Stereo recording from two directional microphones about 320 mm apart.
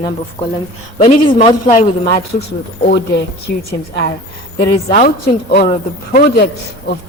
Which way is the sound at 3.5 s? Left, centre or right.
Left.